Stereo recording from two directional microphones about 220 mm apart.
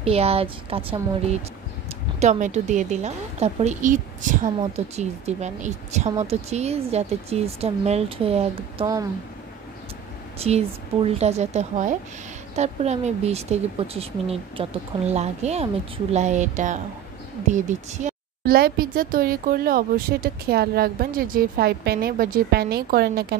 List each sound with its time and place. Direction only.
0.0 s a woman's voice: 25° right (ahead or behind)
2.1 s a woman's voice: 30° right (ahead or behind)
10.4 s a woman's voice: 25° right (ahead or behind); by 23.2 s 45° right (ahead or behind)